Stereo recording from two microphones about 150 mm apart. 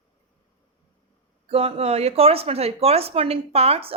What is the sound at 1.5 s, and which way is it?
Speech, 40° right (ahead or behind).